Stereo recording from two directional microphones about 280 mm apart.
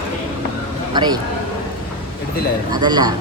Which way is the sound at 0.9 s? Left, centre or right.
Centre.